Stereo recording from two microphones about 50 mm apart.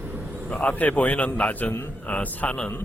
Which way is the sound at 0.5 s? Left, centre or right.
Left.